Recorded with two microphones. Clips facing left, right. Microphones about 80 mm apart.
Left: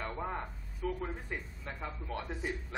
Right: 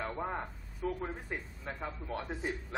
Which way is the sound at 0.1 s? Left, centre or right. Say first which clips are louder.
Right 1 dB; centre.